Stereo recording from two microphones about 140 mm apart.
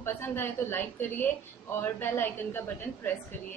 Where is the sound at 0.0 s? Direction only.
15° left (ahead or behind).